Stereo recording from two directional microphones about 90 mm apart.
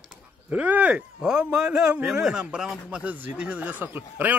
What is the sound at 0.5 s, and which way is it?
A man's voice, 20° right (ahead or behind).